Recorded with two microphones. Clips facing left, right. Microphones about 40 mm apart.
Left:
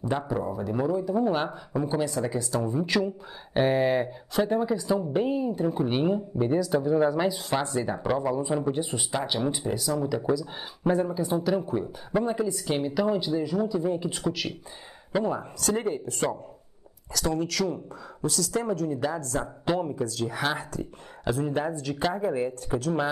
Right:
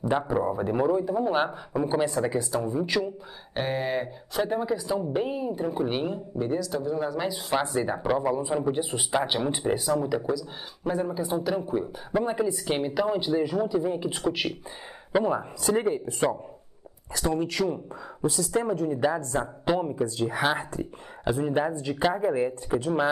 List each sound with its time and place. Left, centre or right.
0.1 s speech: centre
0.5 s speech: right
1.7 s speech: centre
2.0 s speech: right
2.6 s speech: centre
6.0 s speech: centre
7.3 s speech: centre
10.2 s speech: centre
11.1 s speech: centre
17.1 s speech: right
19.6 s speech: centre
20.1 s speech: right
22.7 s speech: right